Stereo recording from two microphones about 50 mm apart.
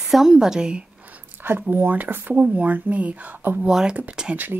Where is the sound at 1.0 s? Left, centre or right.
Right.